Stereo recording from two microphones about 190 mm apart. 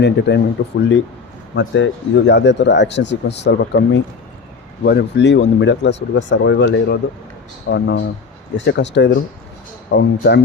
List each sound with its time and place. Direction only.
0.0 s speech: 65° left (ahead or behind)